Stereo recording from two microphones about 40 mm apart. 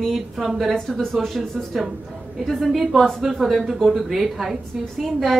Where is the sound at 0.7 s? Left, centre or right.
Centre.